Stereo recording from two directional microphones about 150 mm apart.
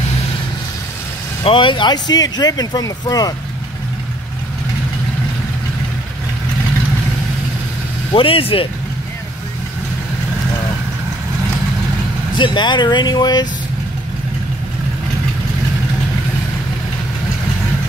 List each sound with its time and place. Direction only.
1.4 s speech: 35° left (ahead or behind)
8.1 s speech: 35° left (ahead or behind)
12.4 s speech: 30° left (ahead or behind)